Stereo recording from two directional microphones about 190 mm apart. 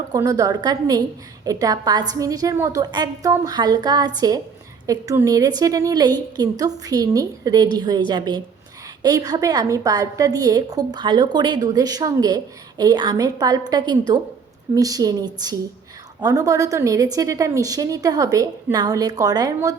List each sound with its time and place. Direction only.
0.1 s a woman's voice: 20° right (ahead or behind)